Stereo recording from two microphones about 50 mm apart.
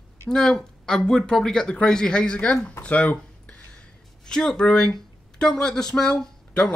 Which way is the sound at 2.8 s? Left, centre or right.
Left.